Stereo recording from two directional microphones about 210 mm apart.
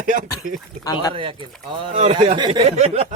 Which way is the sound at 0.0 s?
40° right (ahead or behind).